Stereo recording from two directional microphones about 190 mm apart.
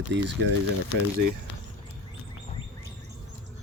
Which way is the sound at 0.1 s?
70° right (ahead or behind).